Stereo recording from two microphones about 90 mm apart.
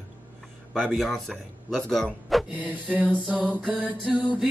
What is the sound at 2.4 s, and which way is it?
Mantra, 15° right (ahead or behind).